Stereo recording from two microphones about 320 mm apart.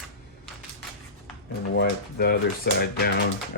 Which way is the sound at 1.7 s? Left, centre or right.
Left.